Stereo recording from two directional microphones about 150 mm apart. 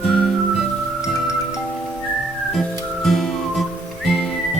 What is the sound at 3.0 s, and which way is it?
Music, centre (ahead or behind).